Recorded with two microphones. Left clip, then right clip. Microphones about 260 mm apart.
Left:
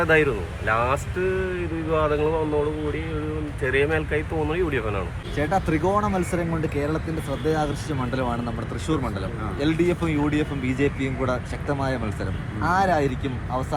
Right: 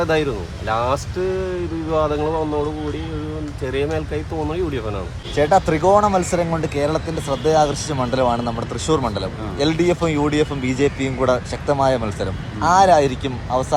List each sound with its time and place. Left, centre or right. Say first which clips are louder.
0.0 s speech: even; centre
3.7 s speech: left 1 dB; centre